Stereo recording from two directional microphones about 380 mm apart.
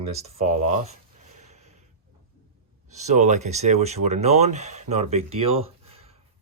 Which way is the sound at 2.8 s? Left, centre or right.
Centre.